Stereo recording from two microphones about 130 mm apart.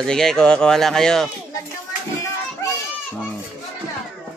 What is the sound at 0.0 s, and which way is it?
Speech, 5° left (ahead or behind).